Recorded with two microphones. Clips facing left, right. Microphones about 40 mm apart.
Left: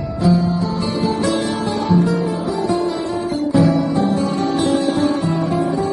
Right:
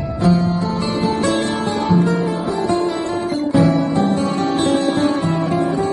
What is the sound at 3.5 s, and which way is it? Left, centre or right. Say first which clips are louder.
Music: even; right.